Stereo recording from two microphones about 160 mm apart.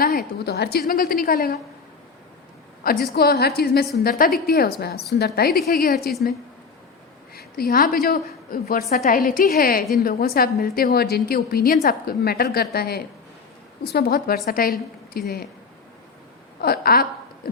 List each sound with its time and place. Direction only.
0.0 s a woman's voice: 70° left (ahead or behind)
2.8 s a woman's voice: 75° left (ahead or behind)
7.3 s a woman's voice: 70° left (ahead or behind)
10.9 s a woman's voice: 80° left
16.6 s a woman's voice: 75° left (ahead or behind)